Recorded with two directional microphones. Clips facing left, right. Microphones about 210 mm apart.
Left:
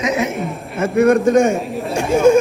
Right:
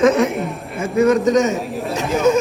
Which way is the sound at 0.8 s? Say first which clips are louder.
Left 2 dB; 55° left (ahead or behind).